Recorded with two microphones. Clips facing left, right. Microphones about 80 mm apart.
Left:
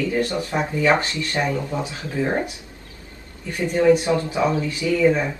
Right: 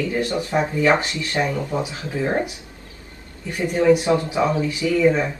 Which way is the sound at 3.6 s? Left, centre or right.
Centre.